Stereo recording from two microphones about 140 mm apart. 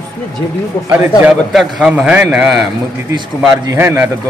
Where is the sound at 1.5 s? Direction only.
Centre (ahead or behind).